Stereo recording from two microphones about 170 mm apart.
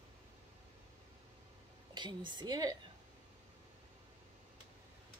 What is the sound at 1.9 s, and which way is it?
Speech, 25° right (ahead or behind).